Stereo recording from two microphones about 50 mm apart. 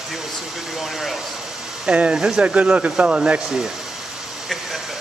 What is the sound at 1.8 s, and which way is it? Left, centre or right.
Speech, right.